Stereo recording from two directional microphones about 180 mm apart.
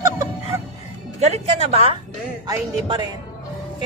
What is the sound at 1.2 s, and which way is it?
Speech, 35° right (ahead or behind).